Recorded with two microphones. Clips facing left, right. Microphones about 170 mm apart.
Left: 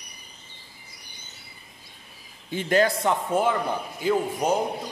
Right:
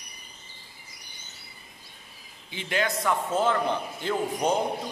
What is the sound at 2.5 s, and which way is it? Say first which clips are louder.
Speech: left 7 dB; 40° left (ahead or behind).